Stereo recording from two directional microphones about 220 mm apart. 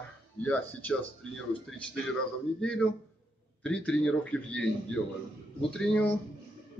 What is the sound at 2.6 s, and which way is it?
Speech, 5° left (ahead or behind).